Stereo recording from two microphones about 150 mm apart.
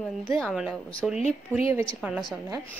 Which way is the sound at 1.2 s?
40° left (ahead or behind).